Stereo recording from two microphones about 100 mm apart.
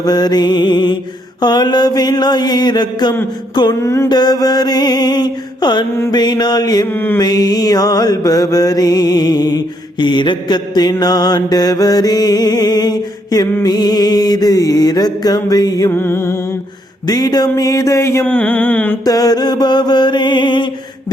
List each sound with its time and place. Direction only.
0.0 s mantra: 45° left (ahead or behind)
3.8 s music: 25° left (ahead or behind)
4.1 s mantra: 45° left (ahead or behind)
6.9 s music: 20° left (ahead or behind)
7.2 s mantra: 40° left (ahead or behind)
15.9 s music: 25° left (ahead or behind)
17.1 s mantra: 40° left (ahead or behind)
18.3 s a sound: 15° left (ahead or behind)
19.0 s mantra: 40° left (ahead or behind)